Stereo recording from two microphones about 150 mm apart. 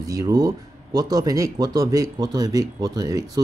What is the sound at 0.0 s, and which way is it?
Speech, 20° right (ahead or behind).